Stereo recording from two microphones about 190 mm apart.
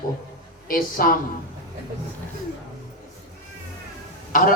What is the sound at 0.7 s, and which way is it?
Speech, 50° left (ahead or behind).